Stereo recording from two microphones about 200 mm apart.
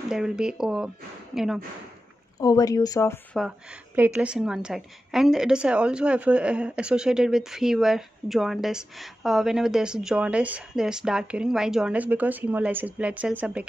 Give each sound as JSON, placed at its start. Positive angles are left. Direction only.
{"t": 0.1, "sound": "a woman's voice", "side_deg": -5}
{"t": 2.3, "sound": "speech", "side_deg": 20}
{"t": 3.3, "sound": "a woman's voice", "side_deg": -5}